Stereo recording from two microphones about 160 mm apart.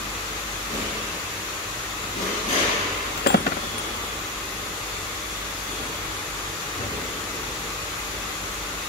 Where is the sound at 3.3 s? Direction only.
90° left.